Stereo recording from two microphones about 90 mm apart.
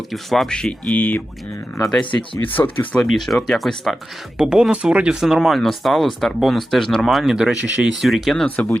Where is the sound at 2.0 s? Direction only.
65° left (ahead or behind).